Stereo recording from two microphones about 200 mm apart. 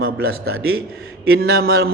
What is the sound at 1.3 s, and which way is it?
Speech, 50° right (ahead or behind).